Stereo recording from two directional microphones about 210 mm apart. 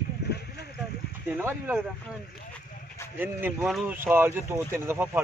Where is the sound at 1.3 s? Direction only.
10° right (ahead or behind).